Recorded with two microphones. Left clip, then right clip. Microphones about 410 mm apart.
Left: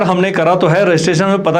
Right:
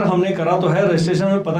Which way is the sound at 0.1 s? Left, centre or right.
Left.